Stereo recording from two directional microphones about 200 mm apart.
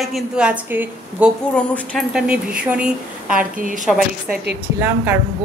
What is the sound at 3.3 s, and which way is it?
Speech, 40° right (ahead or behind).